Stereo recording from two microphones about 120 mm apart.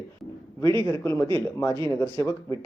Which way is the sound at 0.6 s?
40° right (ahead or behind).